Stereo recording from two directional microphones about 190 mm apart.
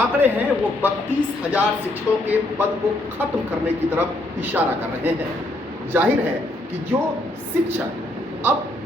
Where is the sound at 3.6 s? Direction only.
10° right (ahead or behind).